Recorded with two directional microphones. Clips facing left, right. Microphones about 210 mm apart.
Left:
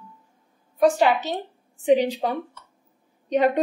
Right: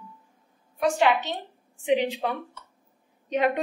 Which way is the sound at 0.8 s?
40° left (ahead or behind).